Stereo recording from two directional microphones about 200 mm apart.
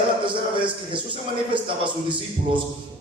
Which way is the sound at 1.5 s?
25° right (ahead or behind).